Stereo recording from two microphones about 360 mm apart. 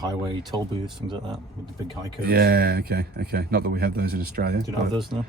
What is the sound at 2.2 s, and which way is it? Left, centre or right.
Speech, right.